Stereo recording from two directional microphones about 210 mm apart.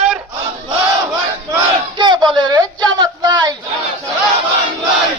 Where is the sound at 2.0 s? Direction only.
20° right (ahead or behind).